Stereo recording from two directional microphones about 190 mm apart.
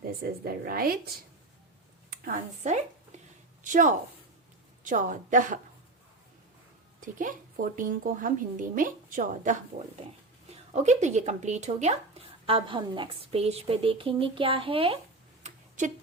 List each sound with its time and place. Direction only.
0.0 s a woman's voice: 50° right (ahead or behind)
2.0 s a woman's voice: 45° right (ahead or behind)
7.0 s a woman's voice: 45° right (ahead or behind); by 14.9 s 30° right (ahead or behind)
15.4 s a sound: 40° right (ahead or behind)